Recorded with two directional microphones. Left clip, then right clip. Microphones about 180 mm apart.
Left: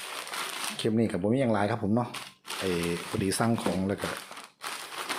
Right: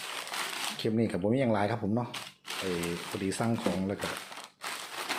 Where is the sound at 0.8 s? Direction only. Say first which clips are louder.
Left 3 dB; 15° left (ahead or behind).